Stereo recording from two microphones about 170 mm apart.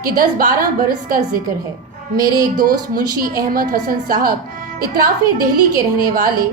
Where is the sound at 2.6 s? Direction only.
60° right (ahead or behind).